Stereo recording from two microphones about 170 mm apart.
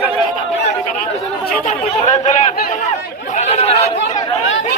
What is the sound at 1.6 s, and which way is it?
Speech, 50° left (ahead or behind).